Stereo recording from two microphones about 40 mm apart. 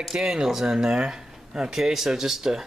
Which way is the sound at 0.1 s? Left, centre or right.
Centre.